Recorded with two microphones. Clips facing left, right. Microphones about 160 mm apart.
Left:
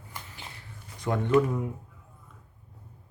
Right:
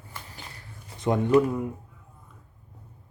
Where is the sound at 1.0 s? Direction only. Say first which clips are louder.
Right 5 dB; 20° right (ahead or behind).